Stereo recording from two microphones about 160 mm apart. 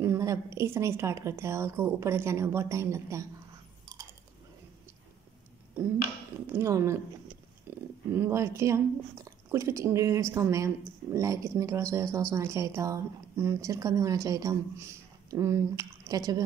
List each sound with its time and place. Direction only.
0.0 s a woman's voice: 15° right (ahead or behind)
6.4 s a woman's voice: 15° right (ahead or behind)
7.7 s a sound: 15° right (ahead or behind)
8.1 s a woman's voice: 15° right (ahead or behind)